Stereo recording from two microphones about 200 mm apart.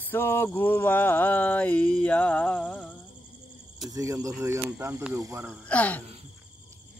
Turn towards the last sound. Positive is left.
turn(degrees=5)  # may be behind; listen again after turning